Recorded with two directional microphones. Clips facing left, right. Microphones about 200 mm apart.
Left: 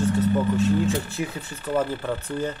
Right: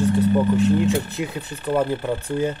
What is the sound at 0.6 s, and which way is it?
Speech, 15° right (ahead or behind).